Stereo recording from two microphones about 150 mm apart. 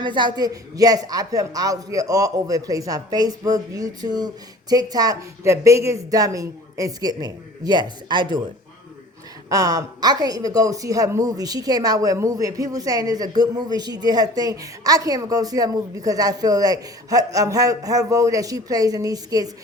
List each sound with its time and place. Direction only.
0.0 s speech: 30° right (ahead or behind)
9.5 s speech: 25° right (ahead or behind)